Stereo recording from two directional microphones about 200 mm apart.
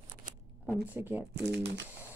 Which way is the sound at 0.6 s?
5° right (ahead or behind).